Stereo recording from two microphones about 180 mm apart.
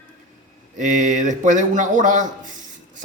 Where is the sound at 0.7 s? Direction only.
45° right (ahead or behind).